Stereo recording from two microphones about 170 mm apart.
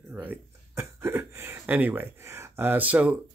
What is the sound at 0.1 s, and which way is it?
Speech, 10° right (ahead or behind).